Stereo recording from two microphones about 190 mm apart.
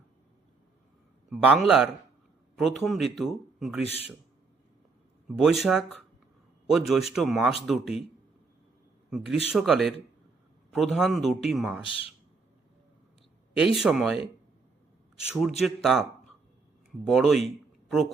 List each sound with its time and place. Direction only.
1.3 s a man's voice: centre (ahead or behind)
5.4 s a man's voice: centre (ahead or behind)
9.0 s a man's voice: 5° right (ahead or behind)
11.9 s speech: 30° left (ahead or behind)
13.7 s a man's voice: centre (ahead or behind)
15.3 s a man's voice: centre (ahead or behind)